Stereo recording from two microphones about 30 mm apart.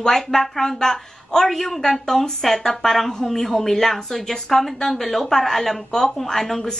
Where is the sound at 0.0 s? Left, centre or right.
Centre.